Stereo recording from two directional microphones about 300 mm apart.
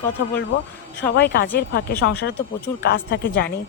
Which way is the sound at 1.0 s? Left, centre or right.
Left.